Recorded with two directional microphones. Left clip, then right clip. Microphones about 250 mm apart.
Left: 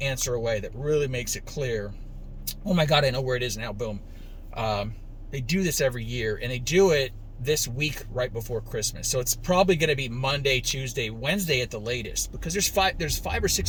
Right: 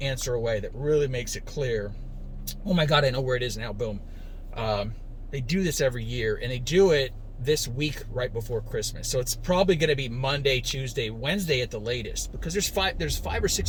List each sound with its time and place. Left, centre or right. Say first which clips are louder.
0.0 s speech: left 1 dB; centre